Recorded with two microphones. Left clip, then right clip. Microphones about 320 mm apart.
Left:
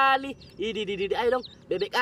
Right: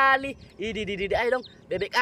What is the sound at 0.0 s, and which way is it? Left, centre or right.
Speech, centre.